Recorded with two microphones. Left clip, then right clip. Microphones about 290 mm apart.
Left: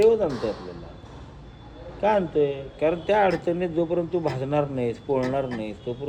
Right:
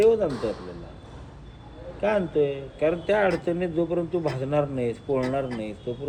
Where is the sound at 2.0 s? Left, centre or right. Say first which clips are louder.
Left 2 dB; centre.